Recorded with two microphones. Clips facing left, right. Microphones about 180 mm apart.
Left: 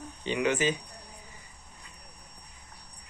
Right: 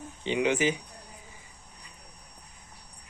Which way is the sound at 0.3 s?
15° right (ahead or behind).